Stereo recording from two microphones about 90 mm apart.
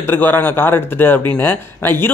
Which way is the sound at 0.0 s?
25° left (ahead or behind).